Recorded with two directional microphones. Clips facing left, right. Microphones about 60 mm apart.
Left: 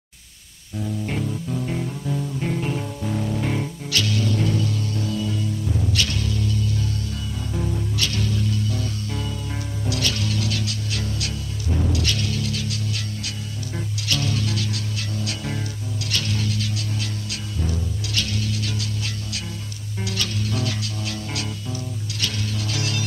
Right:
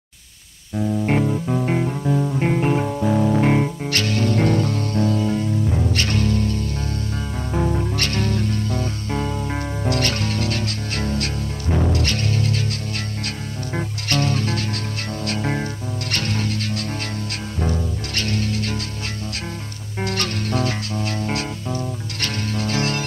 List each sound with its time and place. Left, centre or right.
0.7 s music: right
20.0 s music: right